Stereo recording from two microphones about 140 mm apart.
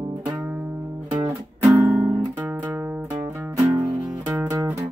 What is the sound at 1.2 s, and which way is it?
Music, 25° right (ahead or behind).